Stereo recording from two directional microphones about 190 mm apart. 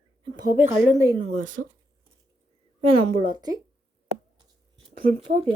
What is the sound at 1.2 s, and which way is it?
Speech, 35° right (ahead or behind).